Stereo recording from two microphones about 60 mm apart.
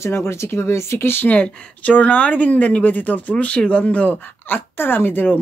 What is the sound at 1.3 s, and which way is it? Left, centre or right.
Speech, left.